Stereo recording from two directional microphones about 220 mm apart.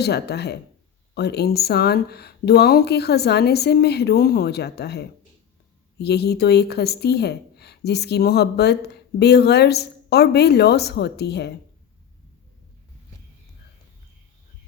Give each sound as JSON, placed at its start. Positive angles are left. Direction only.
{"t": 0.0, "sound": "a woman's voice", "side_deg": 50}